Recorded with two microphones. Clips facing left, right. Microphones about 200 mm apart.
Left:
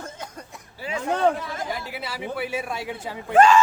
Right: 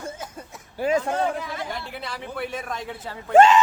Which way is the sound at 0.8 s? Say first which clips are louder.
Right 9 dB; 45° right (ahead or behind).